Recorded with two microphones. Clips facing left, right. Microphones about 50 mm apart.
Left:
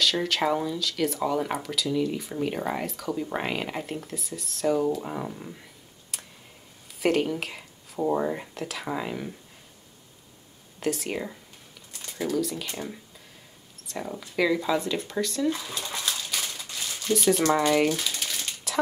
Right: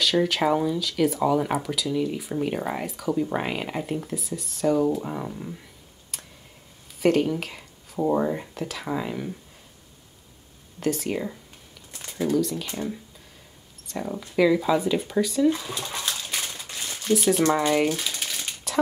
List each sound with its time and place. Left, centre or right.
0.0 s speech: centre
6.1 s tick: centre
7.0 s speech: centre
10.8 s speech: centre
11.9 s a sound: right
12.4 s speech: centre
16.0 s a sound: centre
17.1 s speech: centre